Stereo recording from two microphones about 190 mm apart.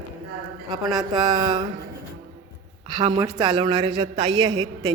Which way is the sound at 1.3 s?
25° right (ahead or behind).